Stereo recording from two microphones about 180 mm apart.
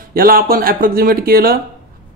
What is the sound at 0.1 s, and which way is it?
Speech, 55° right (ahead or behind).